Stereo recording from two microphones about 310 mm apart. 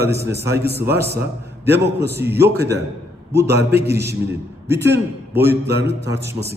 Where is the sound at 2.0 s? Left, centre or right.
Right.